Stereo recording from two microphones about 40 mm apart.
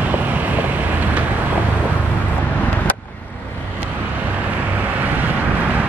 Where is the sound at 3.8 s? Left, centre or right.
Right.